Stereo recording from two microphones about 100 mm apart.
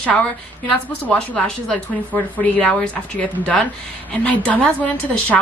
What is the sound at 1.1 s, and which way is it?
A woman's voice, 10° left (ahead or behind).